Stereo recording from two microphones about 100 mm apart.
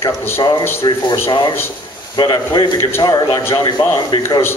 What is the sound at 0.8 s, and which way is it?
A man's voice, 45° left (ahead or behind).